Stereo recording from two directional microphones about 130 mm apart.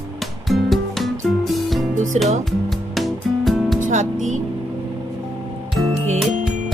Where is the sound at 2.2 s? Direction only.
55° right (ahead or behind).